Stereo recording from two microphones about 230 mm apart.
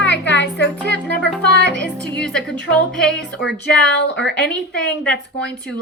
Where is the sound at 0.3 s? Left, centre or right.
Left.